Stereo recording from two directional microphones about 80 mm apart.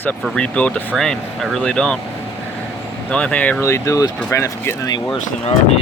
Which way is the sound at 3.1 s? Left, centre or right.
Centre.